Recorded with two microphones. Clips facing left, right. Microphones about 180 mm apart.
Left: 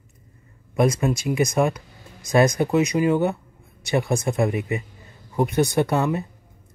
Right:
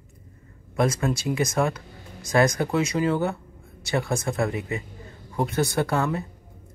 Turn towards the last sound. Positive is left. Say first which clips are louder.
# left 3 dB
turn(degrees=20)  # may be behind; listen again after turning